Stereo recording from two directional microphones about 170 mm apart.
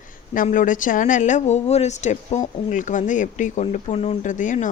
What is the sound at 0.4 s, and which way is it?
Speech, 50° left (ahead or behind).